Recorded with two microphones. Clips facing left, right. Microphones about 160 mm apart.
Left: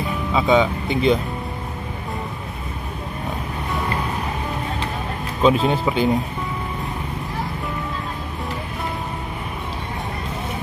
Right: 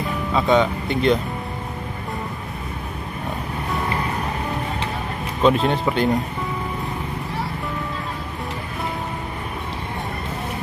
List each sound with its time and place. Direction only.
0.3 s speech: 5° left (ahead or behind)
5.4 s speech: 5° left (ahead or behind)